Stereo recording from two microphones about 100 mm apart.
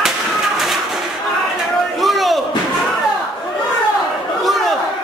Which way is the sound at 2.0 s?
Centre (ahead or behind).